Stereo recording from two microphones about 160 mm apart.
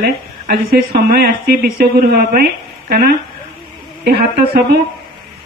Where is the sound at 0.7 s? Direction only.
65° right (ahead or behind).